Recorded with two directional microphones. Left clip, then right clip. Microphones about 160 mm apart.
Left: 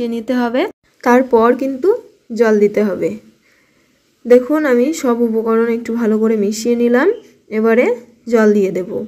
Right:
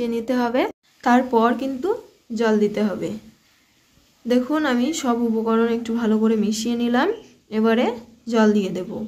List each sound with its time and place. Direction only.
0.0 s a woman's voice: 30° left (ahead or behind)
4.3 s a woman's voice: 30° left (ahead or behind)